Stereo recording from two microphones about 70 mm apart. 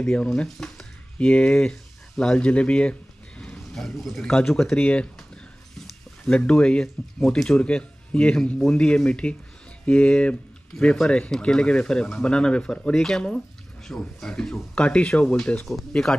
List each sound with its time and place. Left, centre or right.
0.0 s speech: centre